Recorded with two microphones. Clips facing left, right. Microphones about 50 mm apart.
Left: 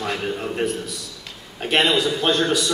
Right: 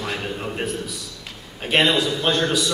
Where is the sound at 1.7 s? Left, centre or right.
Centre.